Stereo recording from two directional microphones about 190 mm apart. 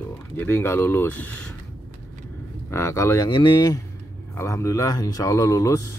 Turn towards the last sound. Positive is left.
turn(degrees=15)  # may be behind; listen again after turning